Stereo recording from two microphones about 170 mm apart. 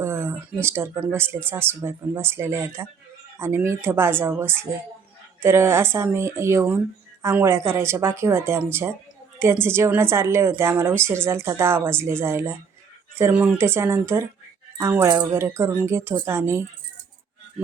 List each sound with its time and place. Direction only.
0.0 s a woman's voice: 15° right (ahead or behind)